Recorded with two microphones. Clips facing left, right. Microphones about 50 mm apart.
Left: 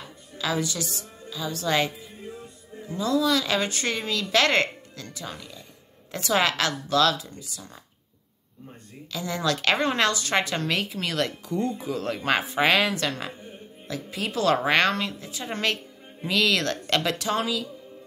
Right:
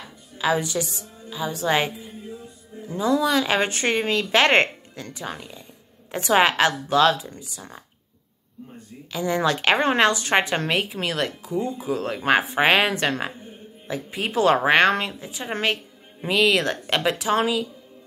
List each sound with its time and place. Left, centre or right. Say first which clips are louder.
0.4 s a woman's voice: right 5 dB; right
9.1 s a woman's voice: right 5 dB; right
10.8 s a woman's voice: right 2 dB; centre
12.2 s a woman's voice: right 4 dB; right
17.4 s a woman's voice: right 5 dB; right